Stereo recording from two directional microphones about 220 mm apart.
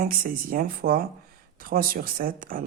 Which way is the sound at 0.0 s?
40° right (ahead or behind).